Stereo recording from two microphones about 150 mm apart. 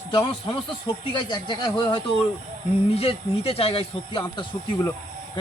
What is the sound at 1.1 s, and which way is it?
Speech, 30° left (ahead or behind).